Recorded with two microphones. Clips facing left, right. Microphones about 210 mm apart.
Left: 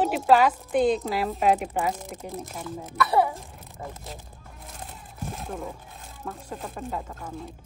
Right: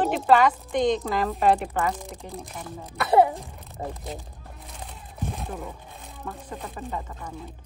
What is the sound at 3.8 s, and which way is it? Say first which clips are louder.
Speech: right 5 dB; 30° right (ahead or behind).